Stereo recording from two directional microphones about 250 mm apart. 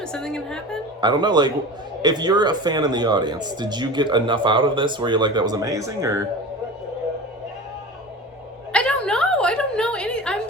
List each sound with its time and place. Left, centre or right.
0.0 s a woman's voice: centre
1.0 s speech: centre
8.7 s a sound: centre